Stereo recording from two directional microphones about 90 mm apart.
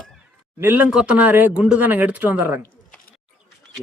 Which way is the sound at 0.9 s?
10° right (ahead or behind).